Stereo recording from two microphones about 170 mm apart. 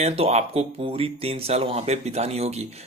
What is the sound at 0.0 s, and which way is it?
Speech, 40° right (ahead or behind).